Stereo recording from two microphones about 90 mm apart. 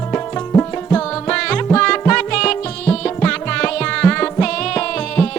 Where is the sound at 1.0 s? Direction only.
10° left (ahead or behind).